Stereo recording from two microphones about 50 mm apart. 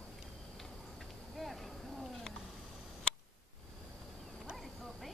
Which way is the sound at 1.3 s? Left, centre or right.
Centre.